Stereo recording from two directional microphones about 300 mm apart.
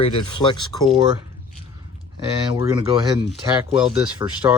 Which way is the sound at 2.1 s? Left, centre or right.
Centre.